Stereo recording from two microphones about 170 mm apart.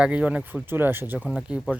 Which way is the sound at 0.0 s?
5° right (ahead or behind).